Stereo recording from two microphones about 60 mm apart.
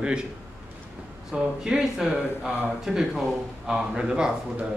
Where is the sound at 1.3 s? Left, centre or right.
Centre.